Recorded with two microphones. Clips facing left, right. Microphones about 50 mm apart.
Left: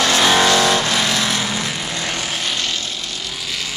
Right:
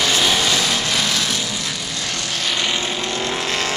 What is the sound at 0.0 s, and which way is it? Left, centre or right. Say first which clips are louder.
Vehicle: left 4 dB; left.